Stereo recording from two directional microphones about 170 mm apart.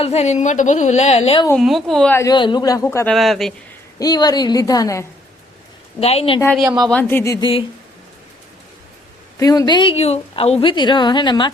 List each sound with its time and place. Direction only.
0.0 s a woman's voice: 40° left (ahead or behind)
1.5 s speech: centre (ahead or behind)
2.1 s a woman's voice: 25° left (ahead or behind)
3.1 s speech: centre (ahead or behind)
4.0 s a woman's voice: 25° left (ahead or behind)
6.0 s a woman's voice: 35° left (ahead or behind)
6.6 s a woman's voice: 20° right (ahead or behind)
6.8 s speech: 10° left (ahead or behind)
9.4 s a woman's voice: 20° left (ahead or behind)